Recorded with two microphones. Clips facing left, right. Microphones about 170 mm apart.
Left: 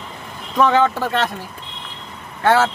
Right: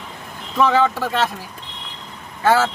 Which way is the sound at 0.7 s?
55° left (ahead or behind).